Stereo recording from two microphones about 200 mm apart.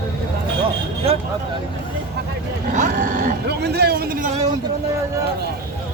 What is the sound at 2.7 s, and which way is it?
Speech, 40° right (ahead or behind).